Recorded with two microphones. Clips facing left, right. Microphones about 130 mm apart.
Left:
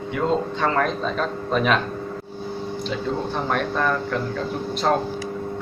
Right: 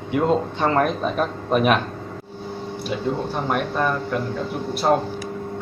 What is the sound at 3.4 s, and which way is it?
Speech, 10° right (ahead or behind).